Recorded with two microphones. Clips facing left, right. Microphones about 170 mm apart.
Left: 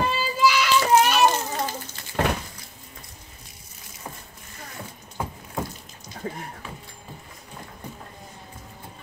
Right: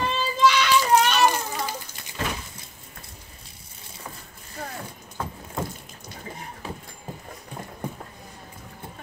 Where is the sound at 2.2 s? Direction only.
60° left (ahead or behind).